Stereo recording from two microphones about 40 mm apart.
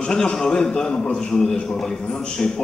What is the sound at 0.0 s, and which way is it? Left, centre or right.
A man's voice, centre.